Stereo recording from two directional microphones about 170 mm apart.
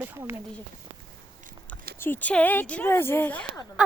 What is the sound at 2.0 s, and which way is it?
Speech, 10° left (ahead or behind).